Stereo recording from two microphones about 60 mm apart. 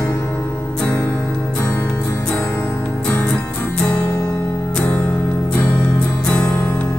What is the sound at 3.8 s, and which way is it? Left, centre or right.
Music, centre.